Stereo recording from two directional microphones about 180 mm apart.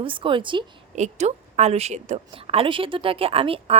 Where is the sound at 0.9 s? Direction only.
40° right (ahead or behind).